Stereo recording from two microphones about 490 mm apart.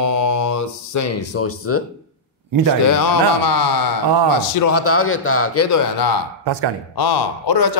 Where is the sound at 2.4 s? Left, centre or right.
Right.